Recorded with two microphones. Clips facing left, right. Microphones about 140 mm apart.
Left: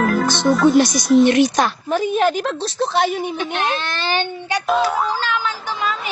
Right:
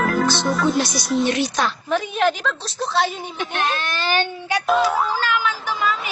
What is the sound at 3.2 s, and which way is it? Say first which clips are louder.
Speech: left 3 dB; 15° left (ahead or behind).